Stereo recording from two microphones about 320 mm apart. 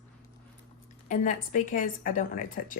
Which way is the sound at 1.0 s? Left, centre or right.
Left.